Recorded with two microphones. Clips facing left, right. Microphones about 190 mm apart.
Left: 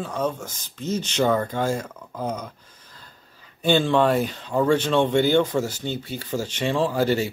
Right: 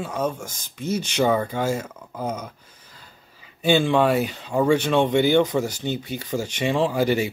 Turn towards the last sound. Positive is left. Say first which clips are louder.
# right 1 dB
turn(degrees=-15)  # may be behind; listen again after turning